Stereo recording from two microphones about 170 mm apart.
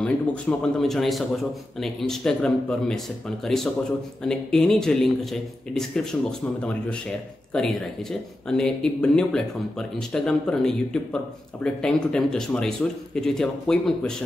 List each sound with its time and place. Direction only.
0.0 s speech: 5° left (ahead or behind)